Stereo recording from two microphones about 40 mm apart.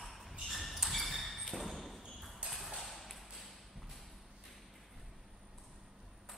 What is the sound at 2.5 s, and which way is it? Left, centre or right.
Ping, centre.